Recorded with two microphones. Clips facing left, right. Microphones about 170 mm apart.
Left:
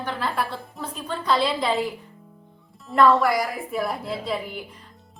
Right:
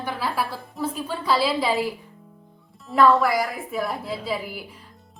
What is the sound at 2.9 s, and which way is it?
A man's voice, centre (ahead or behind).